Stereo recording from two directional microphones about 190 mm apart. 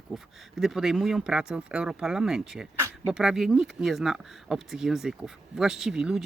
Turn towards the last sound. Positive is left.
turn(degrees=-5)  # may be behind; listen again after turning